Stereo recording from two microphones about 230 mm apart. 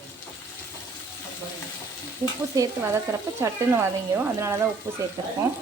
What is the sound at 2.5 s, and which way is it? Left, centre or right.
Speech, centre.